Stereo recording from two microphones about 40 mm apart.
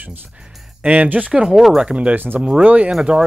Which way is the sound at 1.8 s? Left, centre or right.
Right.